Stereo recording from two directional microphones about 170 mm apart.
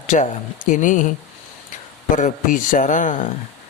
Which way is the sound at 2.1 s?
50° left (ahead or behind).